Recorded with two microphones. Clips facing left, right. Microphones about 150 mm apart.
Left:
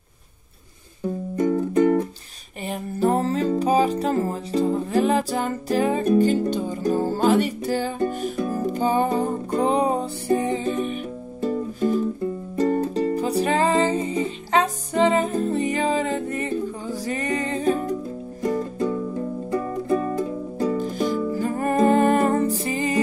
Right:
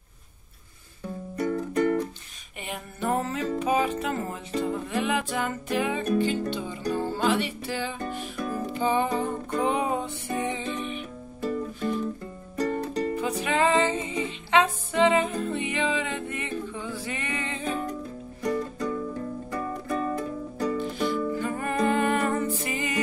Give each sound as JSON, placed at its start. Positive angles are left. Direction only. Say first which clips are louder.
{"t": 1.3, "sound": "music", "louder": "left 6 dB", "side_deg": 25}
{"t": 2.6, "sound": "music", "louder": "left 9 dB", "side_deg": 35}
{"t": 13.1, "sound": "music", "louder": "left 6 dB", "side_deg": 35}
{"t": 18.4, "sound": "music", "louder": "left 4 dB", "side_deg": 30}
{"t": 20.7, "sound": "music", "louder": "left 4 dB", "side_deg": 40}